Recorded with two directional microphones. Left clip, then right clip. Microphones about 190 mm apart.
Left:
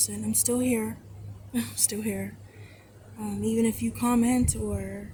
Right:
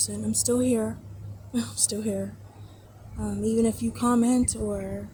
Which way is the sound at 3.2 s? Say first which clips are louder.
Right 2 dB; 5° left (ahead or behind).